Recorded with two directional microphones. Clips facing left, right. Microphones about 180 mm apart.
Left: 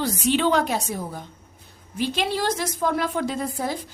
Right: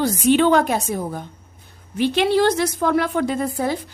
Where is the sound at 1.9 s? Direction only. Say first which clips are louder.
Right 8 dB; 65° right (ahead or behind).